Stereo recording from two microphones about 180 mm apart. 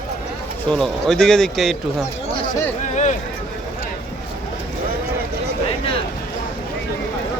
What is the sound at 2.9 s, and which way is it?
Speech, 40° left (ahead or behind).